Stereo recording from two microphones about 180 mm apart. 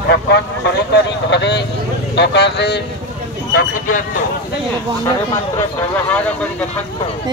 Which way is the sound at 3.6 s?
50° left (ahead or behind).